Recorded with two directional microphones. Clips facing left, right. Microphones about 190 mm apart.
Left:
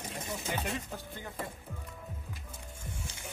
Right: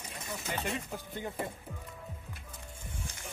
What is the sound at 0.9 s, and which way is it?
Speech, 20° right (ahead or behind).